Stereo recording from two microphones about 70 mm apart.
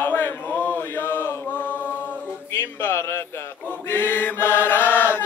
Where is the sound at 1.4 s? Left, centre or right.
Left.